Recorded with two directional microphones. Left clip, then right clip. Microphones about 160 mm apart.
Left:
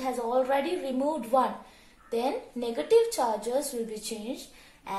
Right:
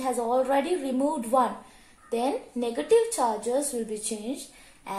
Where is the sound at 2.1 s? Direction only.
70° right (ahead or behind).